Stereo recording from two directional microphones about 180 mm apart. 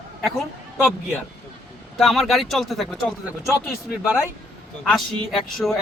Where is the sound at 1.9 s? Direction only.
Centre (ahead or behind).